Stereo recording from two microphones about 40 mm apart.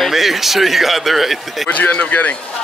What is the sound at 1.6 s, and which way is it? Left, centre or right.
Speech, left.